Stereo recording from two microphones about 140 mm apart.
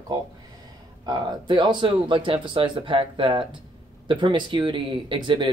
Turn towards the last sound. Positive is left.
turn(degrees=-35)  # may be behind; listen again after turning